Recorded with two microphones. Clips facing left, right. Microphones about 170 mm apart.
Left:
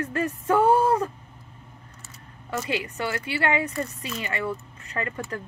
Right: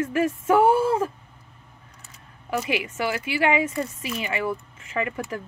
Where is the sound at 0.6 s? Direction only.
90° right.